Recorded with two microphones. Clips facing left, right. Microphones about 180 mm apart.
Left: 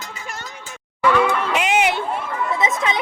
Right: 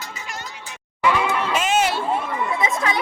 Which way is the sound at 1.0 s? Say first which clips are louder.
Left 3 dB; 15° right (ahead or behind).